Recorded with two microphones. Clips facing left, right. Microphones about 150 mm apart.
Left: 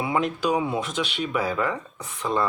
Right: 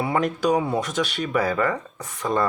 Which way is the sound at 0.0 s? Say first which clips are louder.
Right 2 dB; 45° right (ahead or behind).